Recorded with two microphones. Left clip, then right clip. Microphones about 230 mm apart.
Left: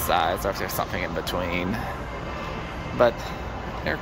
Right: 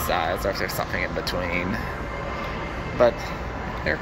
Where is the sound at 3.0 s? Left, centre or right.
Centre.